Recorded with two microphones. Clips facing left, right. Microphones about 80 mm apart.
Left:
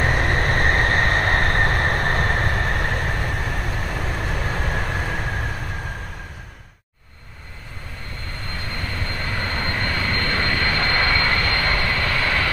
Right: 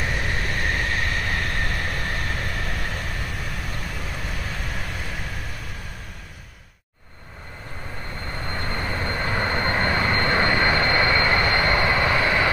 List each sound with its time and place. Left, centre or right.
0.0 s vehicle: left
8.6 s vehicle: right